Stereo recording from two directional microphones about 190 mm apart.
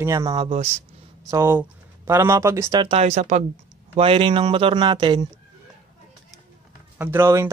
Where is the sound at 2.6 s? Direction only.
25° right (ahead or behind).